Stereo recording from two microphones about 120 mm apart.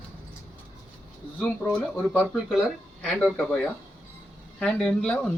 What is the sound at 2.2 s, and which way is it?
Speech, 5° right (ahead or behind).